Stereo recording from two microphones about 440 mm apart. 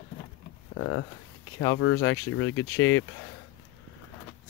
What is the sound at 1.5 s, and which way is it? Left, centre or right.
Speech, left.